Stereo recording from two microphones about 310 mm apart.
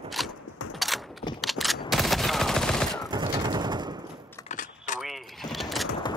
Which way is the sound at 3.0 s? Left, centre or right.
Centre.